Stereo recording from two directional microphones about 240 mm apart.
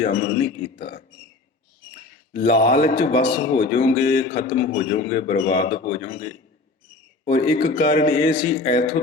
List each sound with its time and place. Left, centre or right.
0.0 s speech: left
2.3 s speech: left